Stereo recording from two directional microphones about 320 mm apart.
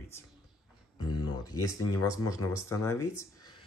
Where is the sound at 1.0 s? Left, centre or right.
Centre.